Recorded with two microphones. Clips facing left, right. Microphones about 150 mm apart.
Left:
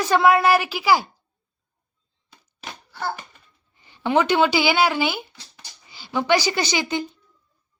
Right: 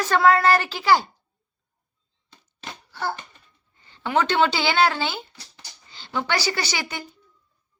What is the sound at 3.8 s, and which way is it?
Speech, 15° left (ahead or behind).